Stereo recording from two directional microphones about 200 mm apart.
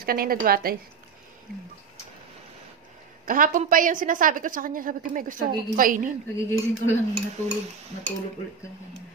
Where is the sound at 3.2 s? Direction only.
45° right (ahead or behind).